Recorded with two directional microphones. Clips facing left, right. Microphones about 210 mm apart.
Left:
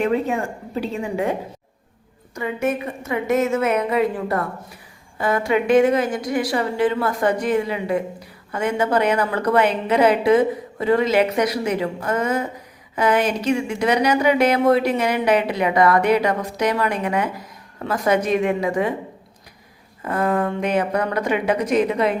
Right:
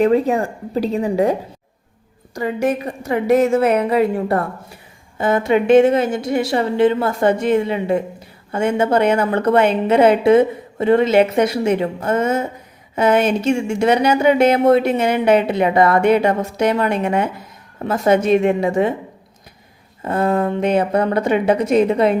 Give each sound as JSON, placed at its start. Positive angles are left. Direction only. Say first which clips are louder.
{"t": 0.0, "sound": "a woman's voice", "louder": "right 6 dB", "side_deg": -35}
{"t": 20.1, "sound": "a woman's voice", "louder": "right 3 dB", "side_deg": -25}